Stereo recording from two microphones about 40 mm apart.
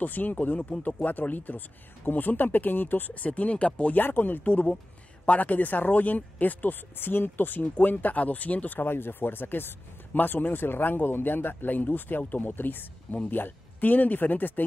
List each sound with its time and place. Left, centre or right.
0.0 s speech: left
3.2 s speech: left
3.9 s speech: left
8.7 s speech: left
13.1 s speech: left